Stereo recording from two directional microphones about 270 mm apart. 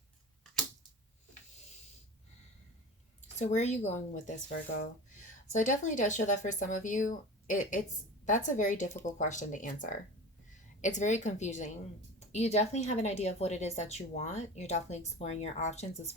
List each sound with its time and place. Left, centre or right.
3.3 s speech: left